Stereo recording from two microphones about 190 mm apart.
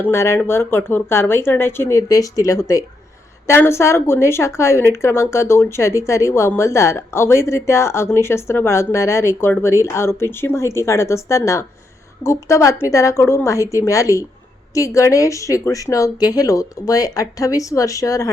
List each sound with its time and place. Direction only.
0.0 s a woman's voice: 15° left (ahead or behind)